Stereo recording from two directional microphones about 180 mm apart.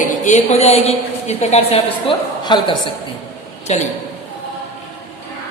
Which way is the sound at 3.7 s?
40° left (ahead or behind).